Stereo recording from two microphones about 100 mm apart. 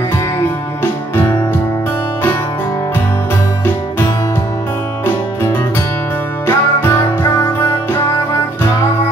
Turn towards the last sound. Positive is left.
turn(degrees=30)  # may be behind; listen again after turning